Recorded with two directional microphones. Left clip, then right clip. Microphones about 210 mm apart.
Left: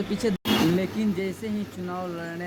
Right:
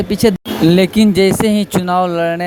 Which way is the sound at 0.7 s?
50° right (ahead or behind).